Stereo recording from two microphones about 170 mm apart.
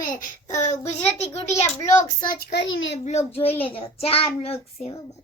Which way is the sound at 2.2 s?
75° left (ahead or behind).